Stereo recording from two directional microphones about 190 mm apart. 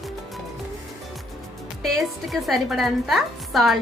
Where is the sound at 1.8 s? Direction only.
Centre (ahead or behind).